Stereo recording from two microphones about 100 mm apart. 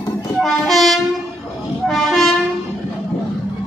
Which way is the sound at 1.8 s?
Centre (ahead or behind).